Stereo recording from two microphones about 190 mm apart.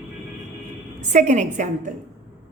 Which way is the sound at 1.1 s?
40° right (ahead or behind).